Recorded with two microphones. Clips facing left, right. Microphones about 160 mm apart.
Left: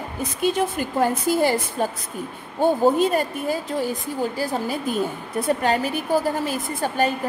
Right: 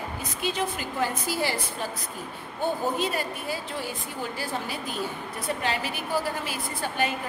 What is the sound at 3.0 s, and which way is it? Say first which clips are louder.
A woman's voice: left 8 dB; 45° left (ahead or behind).